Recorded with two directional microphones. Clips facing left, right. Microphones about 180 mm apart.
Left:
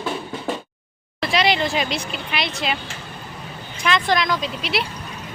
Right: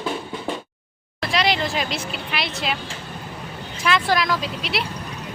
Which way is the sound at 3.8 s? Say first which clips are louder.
Even; 5° right (ahead or behind).